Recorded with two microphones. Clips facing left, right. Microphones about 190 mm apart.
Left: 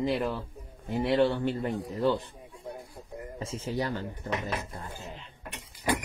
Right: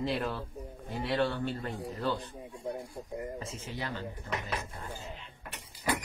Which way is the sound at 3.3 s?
30° left (ahead or behind).